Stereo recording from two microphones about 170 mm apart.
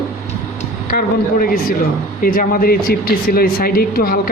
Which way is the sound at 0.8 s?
55° left (ahead or behind).